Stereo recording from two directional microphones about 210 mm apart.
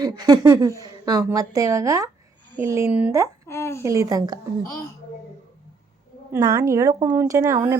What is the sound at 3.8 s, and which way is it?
Speech, 15° right (ahead or behind).